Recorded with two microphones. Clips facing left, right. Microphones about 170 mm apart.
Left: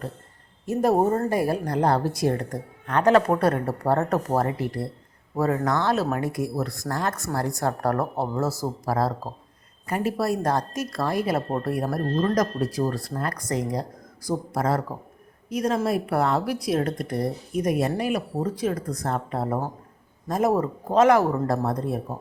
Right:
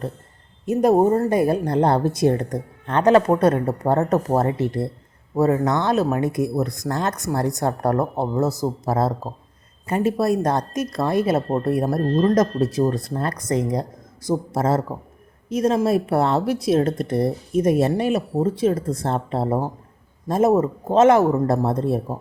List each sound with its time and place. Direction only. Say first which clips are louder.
0.6 s a woman's voice: right 4 dB; 20° right (ahead or behind)